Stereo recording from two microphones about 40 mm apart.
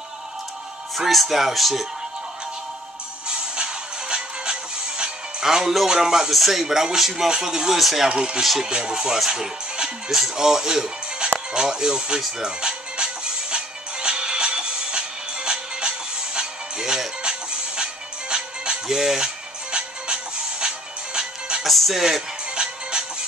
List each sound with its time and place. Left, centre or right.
0.9 s speech: centre
3.3 s music: right
5.9 s speech: centre
7.2 s speech: centre
8.1 s speech: right
11.5 s music: centre
21.6 s music: centre
22.5 s music: right